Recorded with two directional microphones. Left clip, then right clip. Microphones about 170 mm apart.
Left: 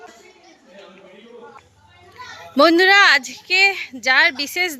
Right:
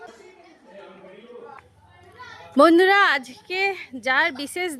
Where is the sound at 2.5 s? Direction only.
20° right (ahead or behind).